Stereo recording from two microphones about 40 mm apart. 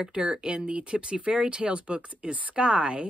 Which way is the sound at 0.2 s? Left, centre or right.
Centre.